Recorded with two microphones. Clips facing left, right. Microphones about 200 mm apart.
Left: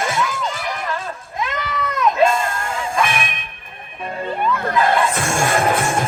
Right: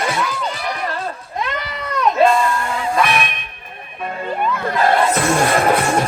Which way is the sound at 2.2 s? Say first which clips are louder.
Right 4 dB; 45° left (ahead or behind).